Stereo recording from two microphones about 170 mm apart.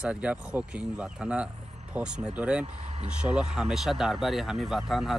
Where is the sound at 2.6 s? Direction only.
40° right (ahead or behind).